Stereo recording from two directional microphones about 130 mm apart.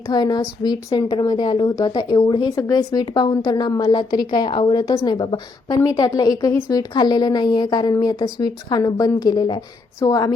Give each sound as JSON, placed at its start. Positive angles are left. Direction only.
{"t": 0.1, "sound": "speech", "side_deg": 35}